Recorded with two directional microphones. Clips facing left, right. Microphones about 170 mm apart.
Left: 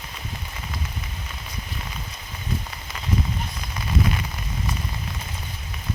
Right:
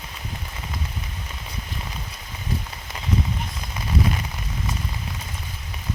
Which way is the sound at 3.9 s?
35° right (ahead or behind).